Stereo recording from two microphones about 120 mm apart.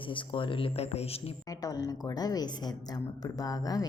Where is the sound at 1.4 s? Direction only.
30° left (ahead or behind).